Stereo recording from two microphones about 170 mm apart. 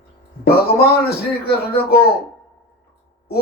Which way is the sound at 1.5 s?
65° left (ahead or behind).